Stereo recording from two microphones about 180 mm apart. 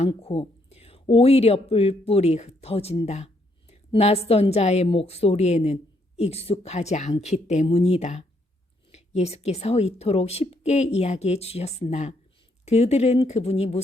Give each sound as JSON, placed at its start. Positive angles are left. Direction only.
{"t": 0.1, "sound": "a woman's voice", "side_deg": 35}